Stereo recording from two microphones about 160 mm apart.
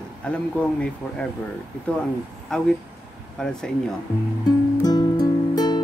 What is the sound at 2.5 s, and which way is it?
Speech, 5° left (ahead or behind).